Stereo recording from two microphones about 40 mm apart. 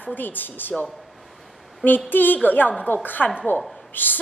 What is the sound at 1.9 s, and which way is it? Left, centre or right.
Speech, left.